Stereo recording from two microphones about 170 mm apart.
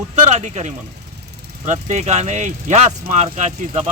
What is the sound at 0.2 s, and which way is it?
Speech, 45° right (ahead or behind).